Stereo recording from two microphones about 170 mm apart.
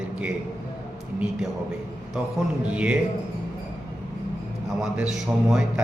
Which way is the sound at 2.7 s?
5° right (ahead or behind).